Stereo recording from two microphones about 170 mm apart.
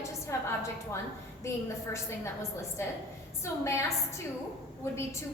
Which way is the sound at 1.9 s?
15° left (ahead or behind).